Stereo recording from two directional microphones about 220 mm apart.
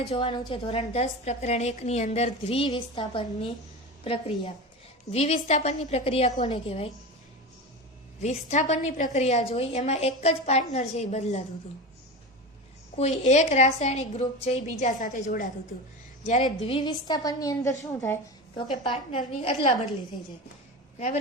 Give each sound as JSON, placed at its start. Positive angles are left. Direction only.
{"t": 0.1, "sound": "a woman's voice", "side_deg": 25}
{"t": 8.2, "sound": "a woman's voice", "side_deg": 30}
{"t": 13.0, "sound": "a woman's voice", "side_deg": 30}